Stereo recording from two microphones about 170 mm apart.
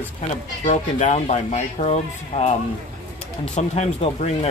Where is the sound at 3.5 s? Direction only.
40° left (ahead or behind).